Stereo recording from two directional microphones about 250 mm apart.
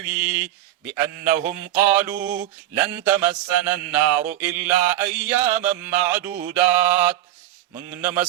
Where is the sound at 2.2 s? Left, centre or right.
Right.